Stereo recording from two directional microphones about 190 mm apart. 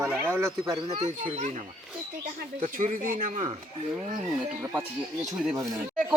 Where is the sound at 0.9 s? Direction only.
40° right (ahead or behind).